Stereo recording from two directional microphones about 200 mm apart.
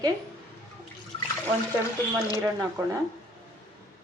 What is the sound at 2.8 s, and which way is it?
Speech, 15° right (ahead or behind).